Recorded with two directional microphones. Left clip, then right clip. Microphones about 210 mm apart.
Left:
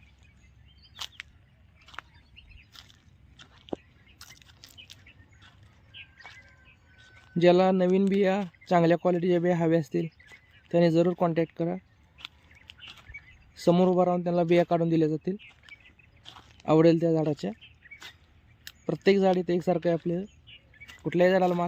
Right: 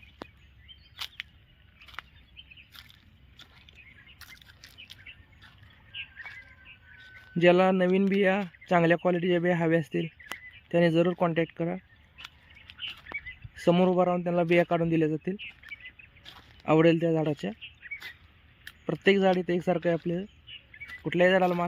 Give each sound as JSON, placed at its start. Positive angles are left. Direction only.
{"t": 0.9, "sound": "a sound", "side_deg": -5}
{"t": 4.2, "sound": "bird", "side_deg": 5}
{"t": 5.9, "sound": "bird", "side_deg": 55}
{"t": 7.3, "sound": "a man's voice", "side_deg": 5}
{"t": 13.6, "sound": "a man's voice", "side_deg": 5}
{"t": 18.6, "sound": "a man's voice", "side_deg": 5}